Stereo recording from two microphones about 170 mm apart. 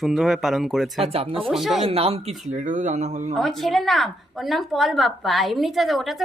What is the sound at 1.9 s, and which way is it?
Speech, 35° right (ahead or behind).